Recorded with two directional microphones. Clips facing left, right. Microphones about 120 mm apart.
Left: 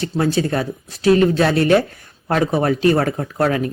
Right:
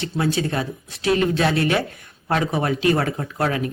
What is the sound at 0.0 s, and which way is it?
Speech, 35° left (ahead or behind).